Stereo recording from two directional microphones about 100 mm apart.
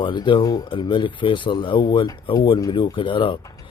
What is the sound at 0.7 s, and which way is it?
Speech, 55° left (ahead or behind).